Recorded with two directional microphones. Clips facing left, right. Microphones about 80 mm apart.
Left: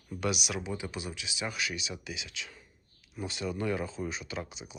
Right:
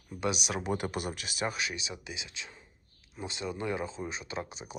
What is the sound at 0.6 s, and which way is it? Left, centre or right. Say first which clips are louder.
Speech: right 4 dB; right.